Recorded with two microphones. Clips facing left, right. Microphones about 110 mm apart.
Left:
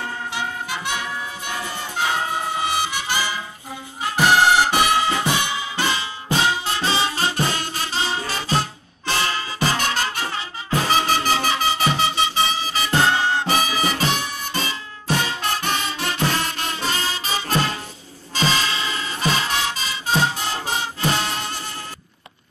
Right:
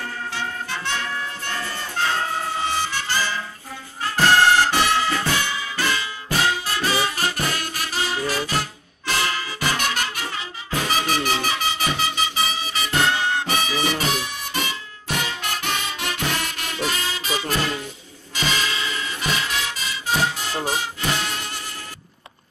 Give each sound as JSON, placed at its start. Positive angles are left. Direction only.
{"t": 0.3, "sound": "music", "side_deg": 15}
{"t": 15.0, "sound": "music", "side_deg": 35}